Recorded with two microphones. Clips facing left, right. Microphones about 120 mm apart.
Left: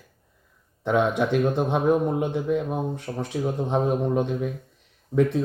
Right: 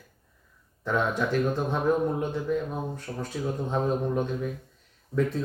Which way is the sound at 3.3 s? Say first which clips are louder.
Left 4 dB; 20° left (ahead or behind).